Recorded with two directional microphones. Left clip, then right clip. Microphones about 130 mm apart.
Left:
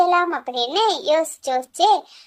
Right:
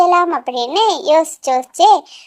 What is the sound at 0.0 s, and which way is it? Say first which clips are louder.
A child's voice: right 5 dB; 25° right (ahead or behind).